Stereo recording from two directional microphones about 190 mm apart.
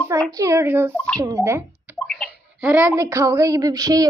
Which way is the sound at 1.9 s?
5° left (ahead or behind).